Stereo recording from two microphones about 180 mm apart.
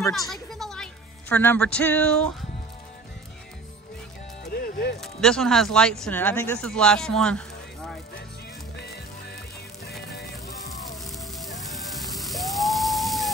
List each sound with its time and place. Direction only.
0.3 s a sound: centre (ahead or behind)
4.5 s music: 55° left (ahead or behind)
5.0 s speech: centre (ahead or behind)
6.7 s speech: 5° left (ahead or behind)
8.7 s music: 65° left (ahead or behind)
11.1 s music: centre (ahead or behind)